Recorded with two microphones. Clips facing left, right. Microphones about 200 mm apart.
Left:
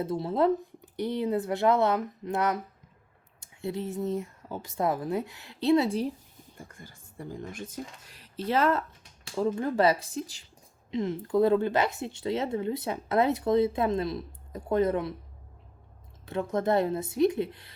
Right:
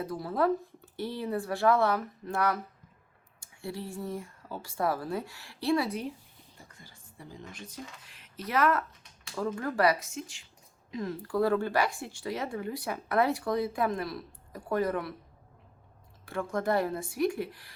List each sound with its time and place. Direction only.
0.0 s speech: 25° left (ahead or behind)
6.7 s speech: 50° left (ahead or behind)
10.9 s speech: 20° left (ahead or behind)
16.2 s speech: 20° left (ahead or behind)